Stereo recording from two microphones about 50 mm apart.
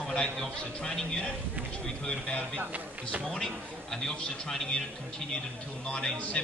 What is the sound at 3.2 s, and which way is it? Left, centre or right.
A man's voice, centre.